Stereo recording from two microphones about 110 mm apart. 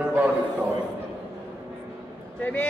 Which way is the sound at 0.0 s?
15° right (ahead or behind).